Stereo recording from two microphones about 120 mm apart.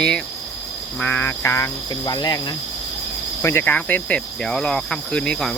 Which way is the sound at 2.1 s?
35° left (ahead or behind).